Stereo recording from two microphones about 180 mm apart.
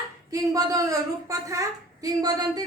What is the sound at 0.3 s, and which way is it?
Speech, 20° right (ahead or behind).